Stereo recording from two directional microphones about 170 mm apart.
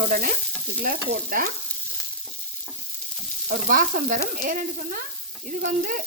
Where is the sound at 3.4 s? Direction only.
55° right (ahead or behind).